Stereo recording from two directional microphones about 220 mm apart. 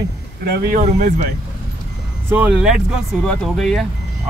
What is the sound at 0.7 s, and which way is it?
Speech, 35° right (ahead or behind).